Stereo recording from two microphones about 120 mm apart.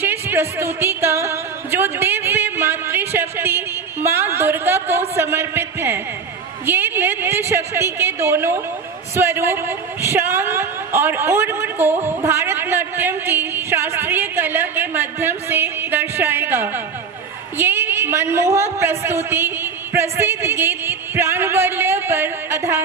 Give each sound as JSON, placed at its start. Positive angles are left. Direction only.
{"t": 0.0, "sound": "a woman's voice", "side_deg": -15}